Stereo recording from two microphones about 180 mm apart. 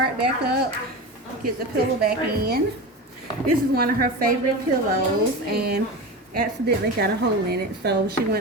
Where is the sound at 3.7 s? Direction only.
55° right (ahead or behind).